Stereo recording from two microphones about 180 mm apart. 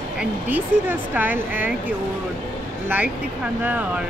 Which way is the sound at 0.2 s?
10° right (ahead or behind).